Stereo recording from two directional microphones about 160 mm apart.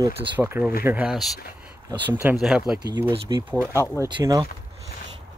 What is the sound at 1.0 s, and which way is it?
Speech, centre (ahead or behind).